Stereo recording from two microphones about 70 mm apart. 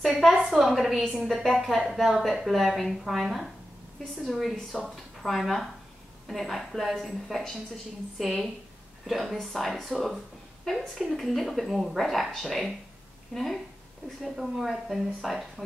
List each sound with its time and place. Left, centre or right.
0.1 s a woman's voice: centre